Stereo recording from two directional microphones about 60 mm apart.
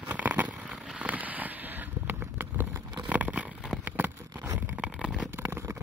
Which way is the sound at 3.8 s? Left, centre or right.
Right.